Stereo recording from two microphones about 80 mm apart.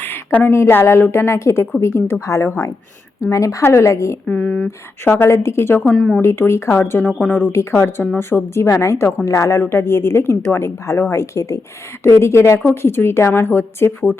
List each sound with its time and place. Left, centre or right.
0.0 s a sound: left
0.5 s a woman's voice: left
4.3 s speech: centre
5.0 s a woman's voice: left
5.8 s speech: centre
6.2 s speech: left
7.5 s a woman's voice: left